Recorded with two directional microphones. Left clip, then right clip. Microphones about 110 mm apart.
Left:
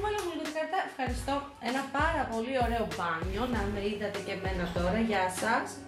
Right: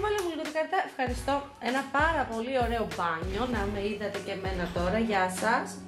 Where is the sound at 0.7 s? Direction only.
20° right (ahead or behind).